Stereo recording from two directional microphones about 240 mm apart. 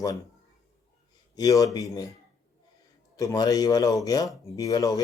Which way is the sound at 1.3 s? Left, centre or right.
Centre.